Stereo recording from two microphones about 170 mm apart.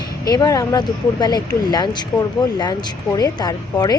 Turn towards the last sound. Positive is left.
turn(degrees=20)  # may be behind; listen again after turning